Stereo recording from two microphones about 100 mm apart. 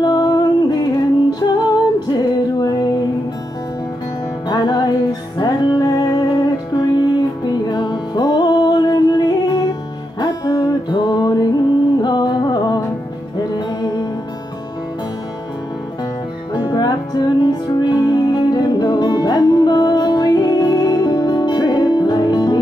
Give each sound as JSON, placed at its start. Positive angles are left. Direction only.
{"t": 0.0, "sound": "music", "side_deg": 45}
{"t": 4.5, "sound": "music", "side_deg": 45}
{"t": 16.5, "sound": "music", "side_deg": 45}